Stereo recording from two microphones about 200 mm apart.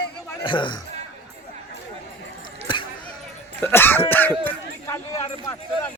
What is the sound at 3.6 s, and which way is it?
Speech, 10° left (ahead or behind).